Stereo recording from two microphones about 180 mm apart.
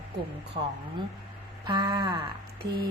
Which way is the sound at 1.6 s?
25° right (ahead or behind).